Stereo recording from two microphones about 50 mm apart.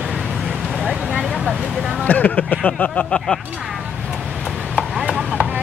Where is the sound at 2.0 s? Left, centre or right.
Left.